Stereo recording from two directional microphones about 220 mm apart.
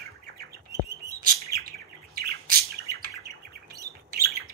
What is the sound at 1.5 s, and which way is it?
Bird, 45° right (ahead or behind).